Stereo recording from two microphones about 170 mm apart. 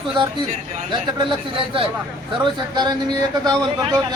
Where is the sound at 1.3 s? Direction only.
30° right (ahead or behind).